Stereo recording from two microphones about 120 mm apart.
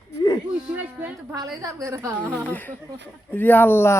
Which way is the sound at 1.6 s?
25° right (ahead or behind).